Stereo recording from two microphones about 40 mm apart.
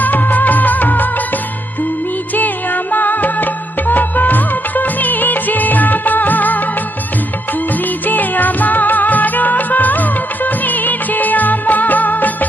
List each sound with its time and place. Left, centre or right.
0.0 s music of bollywood: left
2.3 s music: left
8.0 s music: left